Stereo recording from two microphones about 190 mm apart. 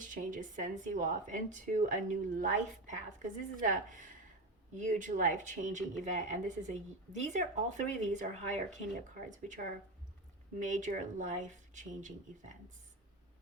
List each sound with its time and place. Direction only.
0.0 s speech: 45° right (ahead or behind)